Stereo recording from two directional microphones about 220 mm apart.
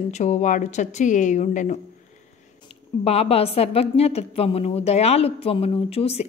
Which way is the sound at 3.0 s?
25° left (ahead or behind).